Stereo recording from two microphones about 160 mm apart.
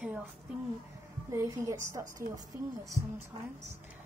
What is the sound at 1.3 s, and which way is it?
A woman's voice, 20° right (ahead or behind).